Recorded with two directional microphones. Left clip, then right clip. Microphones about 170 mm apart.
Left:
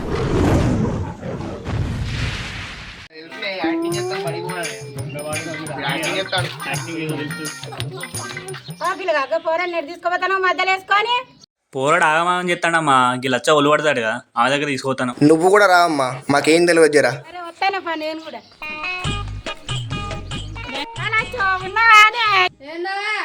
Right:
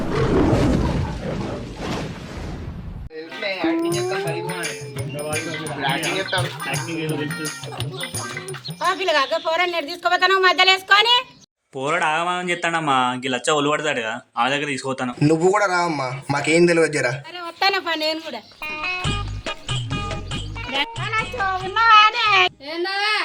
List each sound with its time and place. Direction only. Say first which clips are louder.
0.1 s a sound: even; centre (ahead or behind)
3.4 s music: even; centre (ahead or behind)
6.6 s a woman's voice: even; centre (ahead or behind)
11.7 s speech: left 5 dB; 25° left (ahead or behind)
17.4 s music: right 1 dB; 5° left (ahead or behind)
21.6 s speech: left 2 dB; centre (ahead or behind)
22.7 s a woman's voice: right 2 dB; 5° left (ahead or behind)